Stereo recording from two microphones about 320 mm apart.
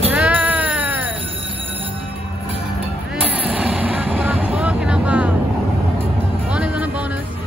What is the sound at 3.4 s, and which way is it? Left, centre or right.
Vehicle, centre.